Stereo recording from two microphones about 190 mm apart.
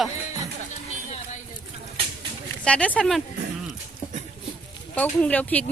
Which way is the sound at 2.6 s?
5° left (ahead or behind).